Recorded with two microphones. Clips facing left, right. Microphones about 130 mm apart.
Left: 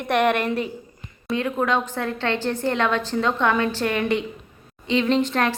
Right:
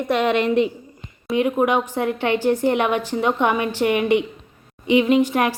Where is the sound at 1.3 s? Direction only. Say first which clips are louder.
Right 4 dB; 20° right (ahead or behind).